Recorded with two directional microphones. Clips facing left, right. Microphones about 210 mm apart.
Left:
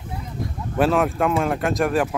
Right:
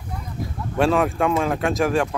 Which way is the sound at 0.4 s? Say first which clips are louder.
Even; centre (ahead or behind).